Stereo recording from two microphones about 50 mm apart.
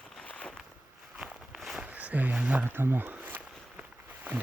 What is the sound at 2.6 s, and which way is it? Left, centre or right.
Speech, right.